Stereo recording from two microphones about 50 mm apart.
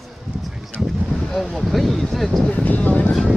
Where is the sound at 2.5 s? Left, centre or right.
Left.